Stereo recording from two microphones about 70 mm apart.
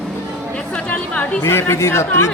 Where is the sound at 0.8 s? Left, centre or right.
Centre.